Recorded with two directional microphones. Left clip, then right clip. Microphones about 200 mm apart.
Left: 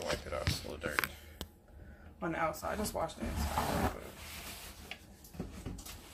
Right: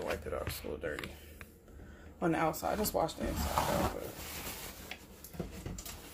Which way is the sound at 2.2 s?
45° right (ahead or behind).